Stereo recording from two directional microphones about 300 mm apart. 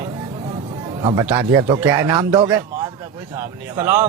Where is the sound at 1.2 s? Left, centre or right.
Centre.